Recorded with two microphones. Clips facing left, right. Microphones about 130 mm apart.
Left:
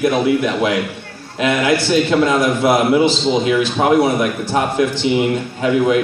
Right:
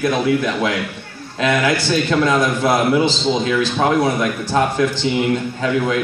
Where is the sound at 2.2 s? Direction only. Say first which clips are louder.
Left 2 dB; 20° left (ahead or behind).